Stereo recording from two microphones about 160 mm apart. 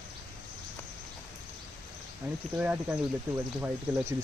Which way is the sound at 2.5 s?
10° right (ahead or behind).